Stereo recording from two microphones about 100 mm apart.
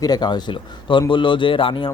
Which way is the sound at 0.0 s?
45° left (ahead or behind).